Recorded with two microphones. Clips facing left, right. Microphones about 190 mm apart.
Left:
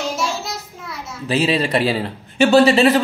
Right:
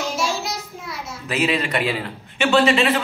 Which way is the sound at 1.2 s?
30° left (ahead or behind).